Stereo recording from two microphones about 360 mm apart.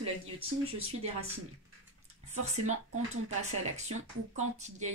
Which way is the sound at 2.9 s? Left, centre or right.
Right.